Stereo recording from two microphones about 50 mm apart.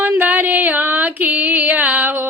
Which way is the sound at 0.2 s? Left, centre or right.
Right.